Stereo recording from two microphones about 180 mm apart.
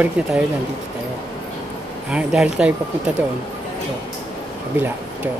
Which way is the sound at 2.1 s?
5° right (ahead or behind).